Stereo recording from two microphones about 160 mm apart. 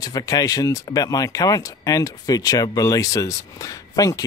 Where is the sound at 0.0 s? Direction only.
25° left (ahead or behind).